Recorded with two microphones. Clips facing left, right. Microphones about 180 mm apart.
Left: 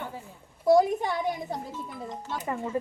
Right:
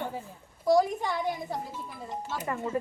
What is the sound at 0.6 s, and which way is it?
Speech, 20° left (ahead or behind).